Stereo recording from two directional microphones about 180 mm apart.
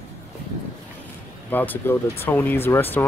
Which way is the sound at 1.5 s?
10° left (ahead or behind).